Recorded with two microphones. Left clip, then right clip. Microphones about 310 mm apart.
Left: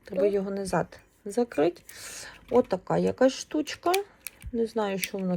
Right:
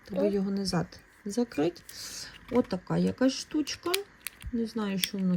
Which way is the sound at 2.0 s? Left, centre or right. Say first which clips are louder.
Even; centre.